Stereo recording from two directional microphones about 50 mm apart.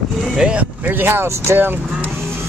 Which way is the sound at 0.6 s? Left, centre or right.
Right.